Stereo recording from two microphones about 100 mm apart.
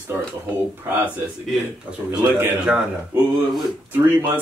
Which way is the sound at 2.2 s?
20° right (ahead or behind).